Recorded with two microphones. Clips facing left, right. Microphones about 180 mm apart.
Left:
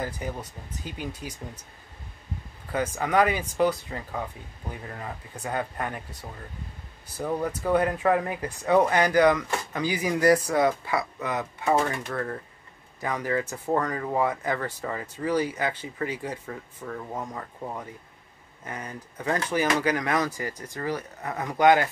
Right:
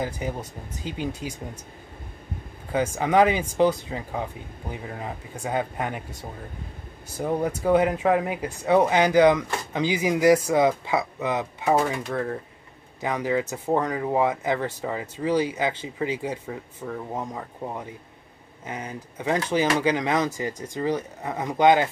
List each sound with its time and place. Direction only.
0.0 s speech: 20° right (ahead or behind)
2.7 s speech: 20° right (ahead or behind)
7.2 s speech: 20° right (ahead or behind)